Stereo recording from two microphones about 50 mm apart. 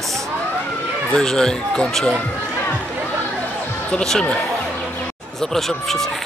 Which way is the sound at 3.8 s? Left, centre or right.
Centre.